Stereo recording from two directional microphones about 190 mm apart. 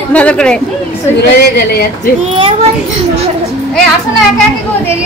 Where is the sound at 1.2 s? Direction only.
60° left (ahead or behind).